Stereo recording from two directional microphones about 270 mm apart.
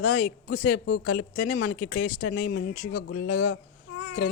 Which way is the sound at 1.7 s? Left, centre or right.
Left.